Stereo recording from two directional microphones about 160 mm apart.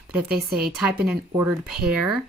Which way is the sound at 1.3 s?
15° right (ahead or behind).